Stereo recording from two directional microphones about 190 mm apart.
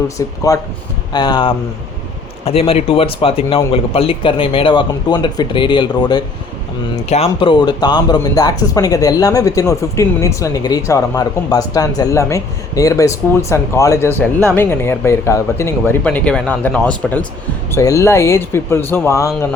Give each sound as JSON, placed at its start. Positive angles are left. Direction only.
{"t": 0.2, "sound": "speech", "side_deg": 15}